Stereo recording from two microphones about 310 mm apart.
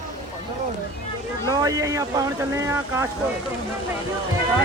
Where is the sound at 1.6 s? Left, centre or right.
Centre.